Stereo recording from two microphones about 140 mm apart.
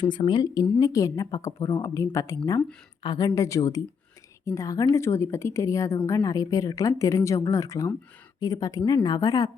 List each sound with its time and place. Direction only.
0.0 s speech: 35° left (ahead or behind)